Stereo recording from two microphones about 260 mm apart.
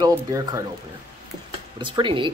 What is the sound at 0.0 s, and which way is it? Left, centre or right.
Speech, centre.